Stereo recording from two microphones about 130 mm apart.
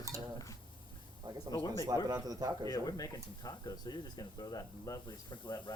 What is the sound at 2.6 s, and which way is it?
Speech, 30° left (ahead or behind).